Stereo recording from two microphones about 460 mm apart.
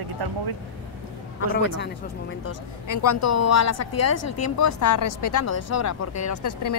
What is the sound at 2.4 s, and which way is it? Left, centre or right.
A woman's voice, left.